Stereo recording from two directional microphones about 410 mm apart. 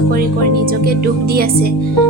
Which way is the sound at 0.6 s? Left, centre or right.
Right.